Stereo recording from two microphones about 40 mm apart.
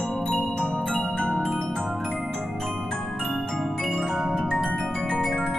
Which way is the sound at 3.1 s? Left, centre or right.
Centre.